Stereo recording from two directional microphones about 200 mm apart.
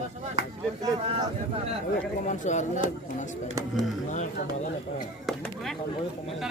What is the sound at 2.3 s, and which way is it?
Speech, 40° left (ahead or behind).